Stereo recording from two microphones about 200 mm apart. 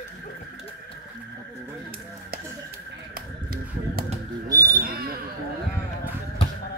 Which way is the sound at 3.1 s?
50° right (ahead or behind).